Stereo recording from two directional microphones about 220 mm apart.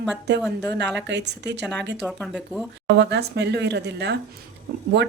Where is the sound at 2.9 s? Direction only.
50° right (ahead or behind).